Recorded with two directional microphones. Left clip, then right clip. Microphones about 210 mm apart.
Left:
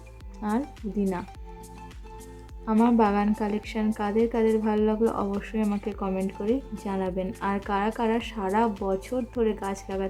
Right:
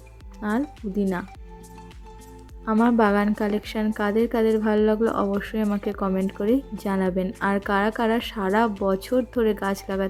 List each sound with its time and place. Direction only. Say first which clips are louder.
0.3 s a woman's voice: right 3 dB; 20° right (ahead or behind)
2.6 s a woman's voice: right 2 dB; 20° right (ahead or behind)